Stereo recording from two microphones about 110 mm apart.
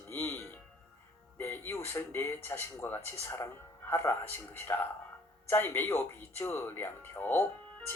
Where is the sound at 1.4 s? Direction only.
20° left (ahead or behind).